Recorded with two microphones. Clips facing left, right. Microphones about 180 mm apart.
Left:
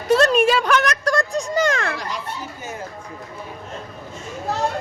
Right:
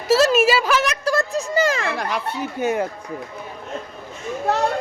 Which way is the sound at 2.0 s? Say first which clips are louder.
Right 5 dB; 60° right (ahead or behind).